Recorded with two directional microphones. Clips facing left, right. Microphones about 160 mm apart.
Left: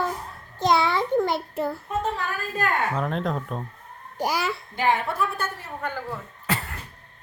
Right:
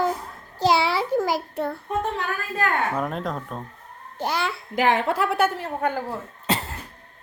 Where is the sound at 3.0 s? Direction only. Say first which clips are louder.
Left 1 dB; 5° right (ahead or behind).